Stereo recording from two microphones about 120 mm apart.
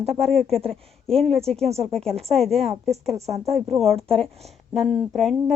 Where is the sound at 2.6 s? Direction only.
60° right (ahead or behind).